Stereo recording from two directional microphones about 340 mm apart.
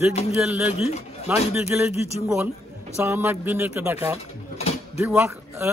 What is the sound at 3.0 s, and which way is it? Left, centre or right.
Speech, centre.